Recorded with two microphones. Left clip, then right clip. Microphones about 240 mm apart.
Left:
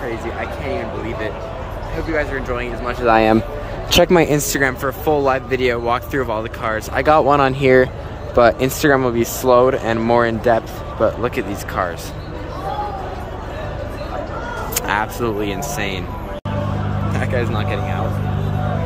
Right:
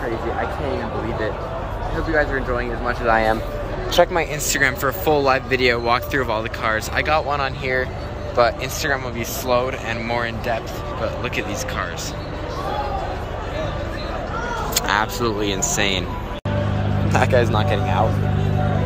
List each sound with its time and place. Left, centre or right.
2.1 s speech: centre
3.1 s speech: left
4.4 s speech: left
7.1 s speech: left
11.2 s speech: centre
14.7 s speech: centre
17.1 s speech: centre